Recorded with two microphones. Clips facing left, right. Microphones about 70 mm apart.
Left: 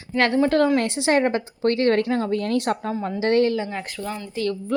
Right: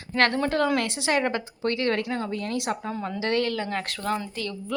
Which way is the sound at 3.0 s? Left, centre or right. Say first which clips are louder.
Left 6 dB; left.